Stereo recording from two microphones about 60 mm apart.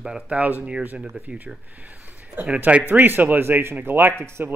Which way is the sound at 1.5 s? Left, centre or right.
Centre.